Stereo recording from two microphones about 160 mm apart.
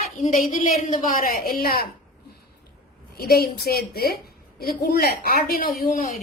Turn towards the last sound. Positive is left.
turn(degrees=60)  # may be behind; listen again after turning